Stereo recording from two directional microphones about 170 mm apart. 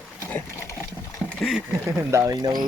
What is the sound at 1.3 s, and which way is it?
Speech, 5° left (ahead or behind).